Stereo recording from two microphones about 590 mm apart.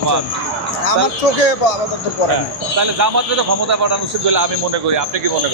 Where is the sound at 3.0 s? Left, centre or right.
Right.